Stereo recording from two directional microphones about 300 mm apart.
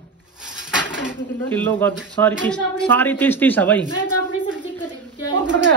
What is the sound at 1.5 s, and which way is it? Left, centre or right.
A woman's voice, centre.